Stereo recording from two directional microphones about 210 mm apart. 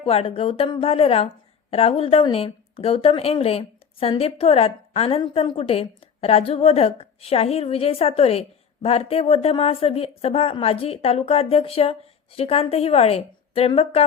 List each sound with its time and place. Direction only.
0.0 s a woman's voice: 25° left (ahead or behind)